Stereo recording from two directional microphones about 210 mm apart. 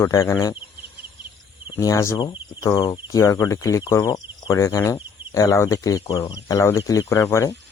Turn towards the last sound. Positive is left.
turn(degrees=15)  # may be behind; listen again after turning